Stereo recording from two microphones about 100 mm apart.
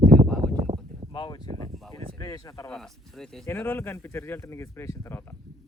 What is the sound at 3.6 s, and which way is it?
Speech, 20° left (ahead or behind).